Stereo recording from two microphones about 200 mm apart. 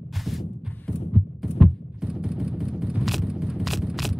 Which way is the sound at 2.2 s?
5° right (ahead or behind).